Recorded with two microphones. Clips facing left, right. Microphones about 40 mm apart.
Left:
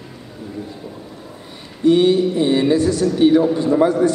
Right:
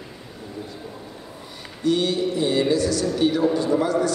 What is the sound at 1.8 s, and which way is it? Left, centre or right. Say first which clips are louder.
A man's voice: left 8 dB; left.